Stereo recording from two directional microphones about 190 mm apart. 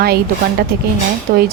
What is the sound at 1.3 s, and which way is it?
Speech, 55° right (ahead or behind).